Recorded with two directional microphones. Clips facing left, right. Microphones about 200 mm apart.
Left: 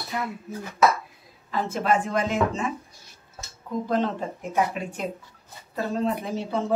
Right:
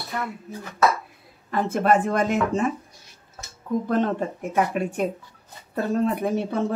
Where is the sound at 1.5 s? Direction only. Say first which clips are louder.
Right 4 dB; 55° right (ahead or behind).